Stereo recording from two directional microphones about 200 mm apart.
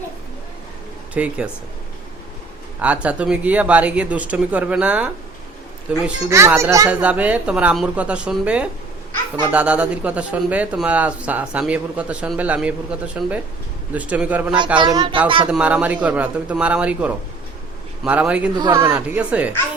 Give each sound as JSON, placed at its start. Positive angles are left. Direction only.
{"t": 1.1, "sound": "a man's voice", "side_deg": -5}
{"t": 2.8, "sound": "a man's voice", "side_deg": -5}
{"t": 14.8, "sound": "speech", "side_deg": -20}
{"t": 15.4, "sound": "a man's voice", "side_deg": -5}
{"t": 18.5, "sound": "speech", "side_deg": -20}
{"t": 18.9, "sound": "a man's voice", "side_deg": -5}